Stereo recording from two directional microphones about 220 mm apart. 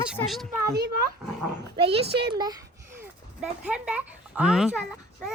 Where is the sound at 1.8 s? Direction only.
25° right (ahead or behind).